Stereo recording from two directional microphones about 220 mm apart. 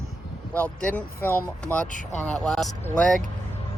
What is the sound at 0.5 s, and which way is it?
Speech, 5° left (ahead or behind).